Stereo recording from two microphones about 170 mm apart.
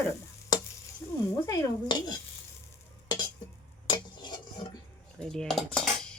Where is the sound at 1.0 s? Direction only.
15° left (ahead or behind).